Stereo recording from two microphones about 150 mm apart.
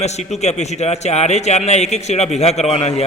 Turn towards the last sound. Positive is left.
turn(degrees=45)  # may be behind; listen again after turning